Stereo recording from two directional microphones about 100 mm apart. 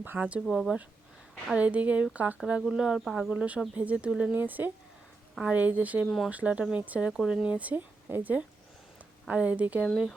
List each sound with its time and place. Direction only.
0.0 s speech: 15° right (ahead or behind)
0.4 s speech: centre (ahead or behind)
1.5 s speech: 15° right (ahead or behind)
6.1 s speech: centre (ahead or behind)
6.3 s speech: 10° right (ahead or behind)
7.1 s speech: 5° right (ahead or behind)